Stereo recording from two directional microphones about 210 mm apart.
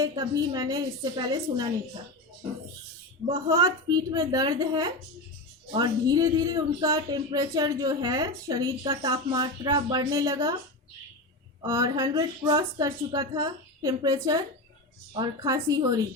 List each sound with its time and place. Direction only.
0.0 s speech: 15° right (ahead or behind)
3.2 s a woman's voice: 25° right (ahead or behind)
11.6 s speech: 15° right (ahead or behind)